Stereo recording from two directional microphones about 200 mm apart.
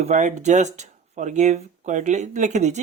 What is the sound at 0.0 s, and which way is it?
Speech, 35° right (ahead or behind).